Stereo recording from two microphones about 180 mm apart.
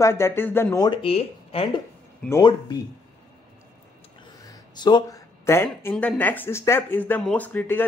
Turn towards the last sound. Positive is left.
turn(degrees=10)  # may be behind; listen again after turning